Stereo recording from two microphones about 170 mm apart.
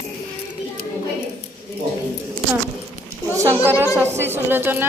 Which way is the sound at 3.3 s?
15° right (ahead or behind).